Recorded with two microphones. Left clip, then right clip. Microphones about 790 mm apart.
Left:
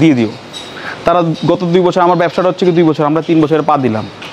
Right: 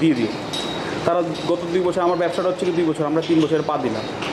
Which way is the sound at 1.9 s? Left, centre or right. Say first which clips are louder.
Left 8 dB; left.